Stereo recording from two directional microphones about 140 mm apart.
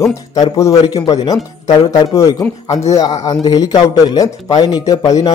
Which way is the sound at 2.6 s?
50° left (ahead or behind).